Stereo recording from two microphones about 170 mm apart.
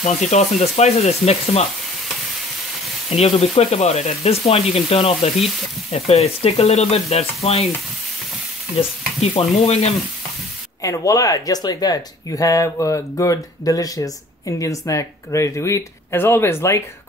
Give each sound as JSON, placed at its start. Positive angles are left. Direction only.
{"t": 0.0, "sound": "speech", "side_deg": 45}
{"t": 3.2, "sound": "speech", "side_deg": 40}
{"t": 9.2, "sound": "speech", "side_deg": 40}
{"t": 10.8, "sound": "speech", "side_deg": 20}